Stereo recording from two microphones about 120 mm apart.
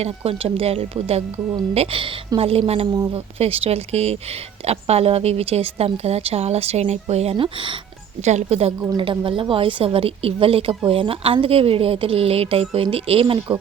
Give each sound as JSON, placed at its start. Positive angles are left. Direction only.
{"t": 0.3, "sound": "a woman's voice", "side_deg": -55}
{"t": 2.8, "sound": "a woman's voice", "side_deg": -35}
{"t": 3.1, "sound": "a woman's voice", "side_deg": -55}
{"t": 8.2, "sound": "speech", "side_deg": -70}
{"t": 9.0, "sound": "speech", "side_deg": -45}